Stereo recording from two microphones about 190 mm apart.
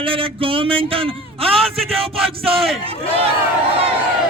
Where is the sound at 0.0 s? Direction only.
25° right (ahead or behind).